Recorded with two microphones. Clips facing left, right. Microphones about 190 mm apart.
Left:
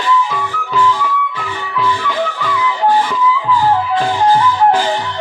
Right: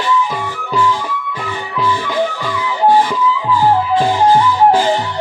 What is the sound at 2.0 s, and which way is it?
Music, 15° right (ahead or behind).